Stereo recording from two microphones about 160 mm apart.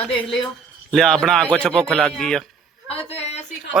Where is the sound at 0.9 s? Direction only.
5° left (ahead or behind).